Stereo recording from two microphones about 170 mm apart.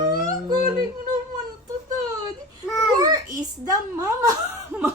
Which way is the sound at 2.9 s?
20° right (ahead or behind).